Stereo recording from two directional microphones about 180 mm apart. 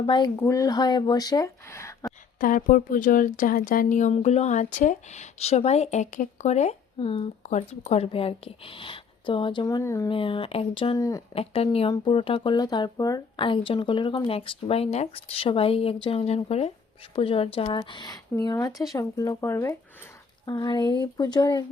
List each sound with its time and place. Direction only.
0.0 s a woman's voice: 25° left (ahead or behind)
2.4 s a woman's voice: 50° left (ahead or behind); by 10.1 s 15° left (ahead or behind)
10.1 s a woman's voice: 30° left (ahead or behind)
10.9 s a woman's voice: 20° left (ahead or behind)
11.3 s a woman's voice: 35° left (ahead or behind)